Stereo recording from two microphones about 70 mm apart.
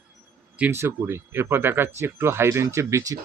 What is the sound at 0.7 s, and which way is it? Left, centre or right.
Speech, right.